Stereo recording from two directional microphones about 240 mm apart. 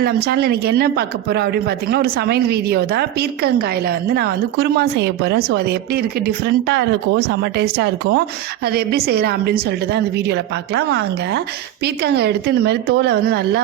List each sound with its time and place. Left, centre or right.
0.0 s a woman's voice: right